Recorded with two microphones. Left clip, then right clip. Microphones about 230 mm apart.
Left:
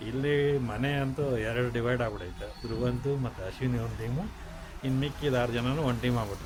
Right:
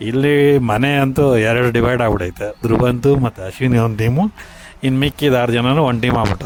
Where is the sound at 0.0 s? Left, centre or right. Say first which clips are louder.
Right 14 dB; right.